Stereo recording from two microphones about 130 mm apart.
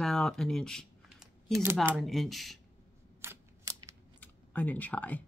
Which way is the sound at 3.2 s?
25° right (ahead or behind).